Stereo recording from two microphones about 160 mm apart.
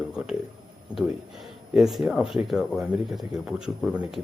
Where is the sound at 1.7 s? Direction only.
Centre (ahead or behind).